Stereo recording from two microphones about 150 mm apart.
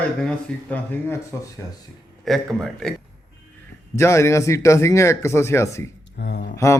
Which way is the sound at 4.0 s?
20° left (ahead or behind).